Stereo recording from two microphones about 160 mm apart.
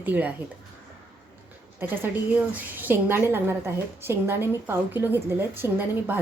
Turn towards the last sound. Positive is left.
turn(degrees=-10)  # may be behind; listen again after turning